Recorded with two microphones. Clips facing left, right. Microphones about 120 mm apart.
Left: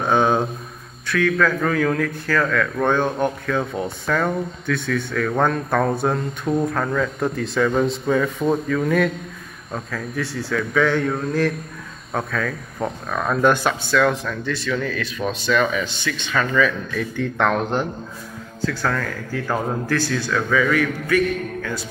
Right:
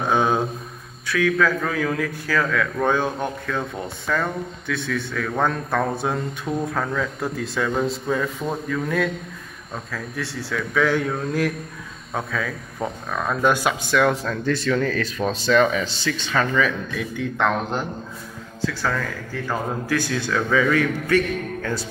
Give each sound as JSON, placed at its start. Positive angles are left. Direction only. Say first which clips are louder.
{"t": 0.1, "sound": "a sound", "louder": "left 2 dB", "side_deg": 0}
{"t": 1.0, "sound": "a man's voice", "louder": "left 1 dB", "side_deg": -10}
{"t": 13.8, "sound": "a man's voice", "louder": "left 1 dB", "side_deg": -20}
{"t": 14.4, "sound": "speech", "louder": "right 4 dB", "side_deg": -45}
{"t": 17.2, "sound": "a man's voice", "louder": "left 2 dB", "side_deg": -5}
{"t": 19.9, "sound": "a man's voice", "louder": "even", "side_deg": -15}